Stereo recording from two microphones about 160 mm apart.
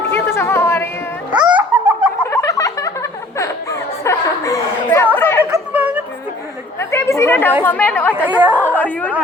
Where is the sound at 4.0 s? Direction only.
20° left (ahead or behind).